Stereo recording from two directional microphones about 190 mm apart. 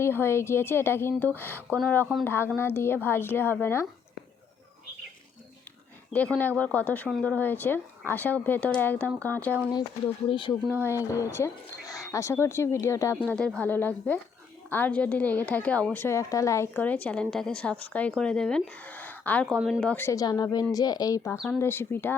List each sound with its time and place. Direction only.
0.0 s a woman's voice: 10° left (ahead or behind)
6.1 s a woman's voice: 5° left (ahead or behind)
10.2 s speech: 25° left (ahead or behind)
11.3 s a woman's voice: 15° left (ahead or behind)
21.3 s speech: centre (ahead or behind)
21.6 s a woman's voice: 10° left (ahead or behind)